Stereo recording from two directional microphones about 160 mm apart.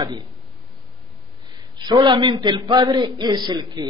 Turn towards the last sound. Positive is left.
turn(degrees=-25)  # may be behind; listen again after turning